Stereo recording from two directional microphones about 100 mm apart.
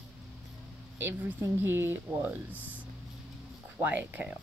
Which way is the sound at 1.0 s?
20° right (ahead or behind).